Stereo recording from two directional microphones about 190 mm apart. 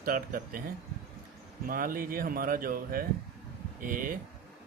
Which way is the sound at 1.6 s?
50° right (ahead or behind).